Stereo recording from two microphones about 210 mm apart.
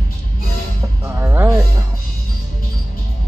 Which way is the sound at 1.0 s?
10° right (ahead or behind).